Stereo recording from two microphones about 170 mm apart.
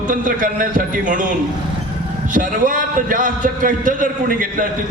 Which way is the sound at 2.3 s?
50° right (ahead or behind).